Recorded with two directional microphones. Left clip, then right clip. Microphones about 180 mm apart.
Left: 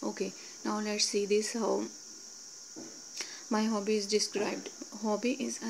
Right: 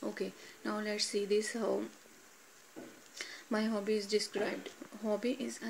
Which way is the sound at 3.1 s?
15° left (ahead or behind).